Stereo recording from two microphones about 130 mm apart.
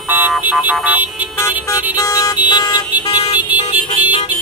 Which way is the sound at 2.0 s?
25° left (ahead or behind).